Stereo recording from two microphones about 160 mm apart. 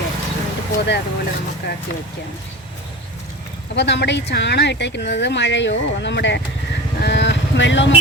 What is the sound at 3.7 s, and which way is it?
Speech, 90° left.